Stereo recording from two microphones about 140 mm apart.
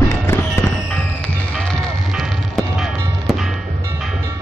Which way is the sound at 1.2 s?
5° left (ahead or behind).